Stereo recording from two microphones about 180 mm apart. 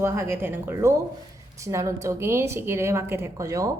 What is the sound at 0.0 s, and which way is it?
A woman's voice, 15° right (ahead or behind).